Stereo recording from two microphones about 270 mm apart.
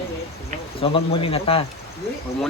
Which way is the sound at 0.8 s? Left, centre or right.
Left.